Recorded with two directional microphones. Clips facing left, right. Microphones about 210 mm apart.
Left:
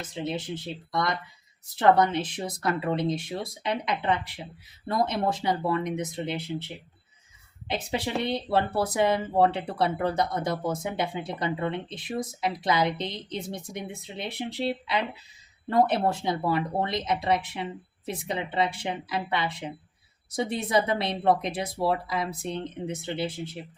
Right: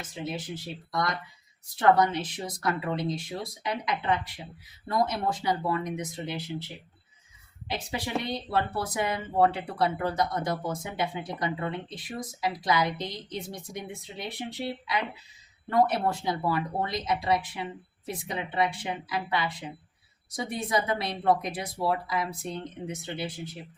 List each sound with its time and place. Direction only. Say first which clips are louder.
0.1 s speech: left 3 dB; 20° left (ahead or behind)
7.7 s speech: left 3 dB; 25° left (ahead or behind)